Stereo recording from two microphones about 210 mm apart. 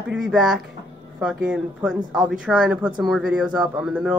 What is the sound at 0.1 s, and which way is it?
A woman's voice, 5° right (ahead or behind).